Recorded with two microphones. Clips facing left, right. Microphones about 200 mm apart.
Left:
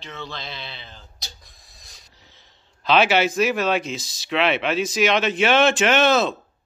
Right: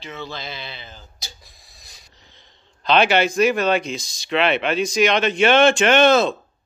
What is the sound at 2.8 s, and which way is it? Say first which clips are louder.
Speech: right 1 dB; 5° left (ahead or behind).